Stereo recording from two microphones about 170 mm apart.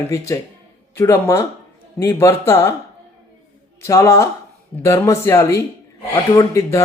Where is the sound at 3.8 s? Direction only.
20° left (ahead or behind).